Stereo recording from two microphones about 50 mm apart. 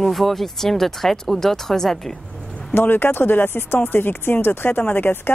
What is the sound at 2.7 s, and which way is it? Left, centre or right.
Speech, left.